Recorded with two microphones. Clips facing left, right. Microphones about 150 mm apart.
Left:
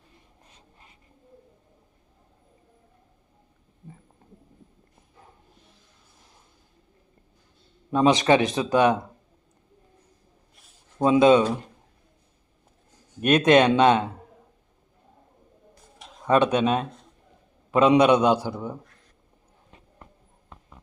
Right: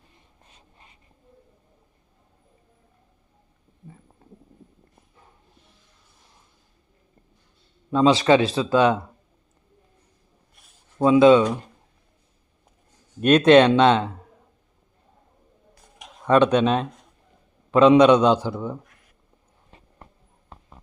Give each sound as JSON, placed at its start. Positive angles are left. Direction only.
{"t": 7.9, "sound": "a man's voice", "side_deg": 20}
{"t": 11.0, "sound": "speech", "side_deg": 20}
{"t": 13.2, "sound": "a man's voice", "side_deg": 10}
{"t": 16.2, "sound": "a man's voice", "side_deg": 10}
{"t": 20.5, "sound": "horse", "side_deg": -30}